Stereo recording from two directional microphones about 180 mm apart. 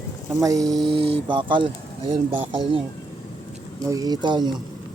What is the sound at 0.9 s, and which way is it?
Speech, 30° right (ahead or behind).